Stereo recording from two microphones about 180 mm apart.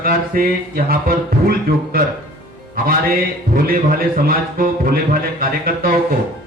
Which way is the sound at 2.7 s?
55° right (ahead or behind).